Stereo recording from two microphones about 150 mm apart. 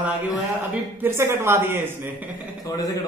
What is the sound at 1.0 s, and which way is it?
Speech, 15° right (ahead or behind).